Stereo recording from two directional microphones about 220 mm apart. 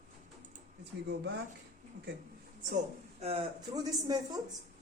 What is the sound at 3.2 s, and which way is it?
Speech, 30° right (ahead or behind).